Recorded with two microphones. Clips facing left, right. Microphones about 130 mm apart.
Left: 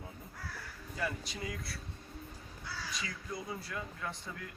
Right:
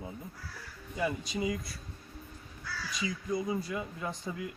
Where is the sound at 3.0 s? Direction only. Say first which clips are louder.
Right 13 dB; 15° right (ahead or behind).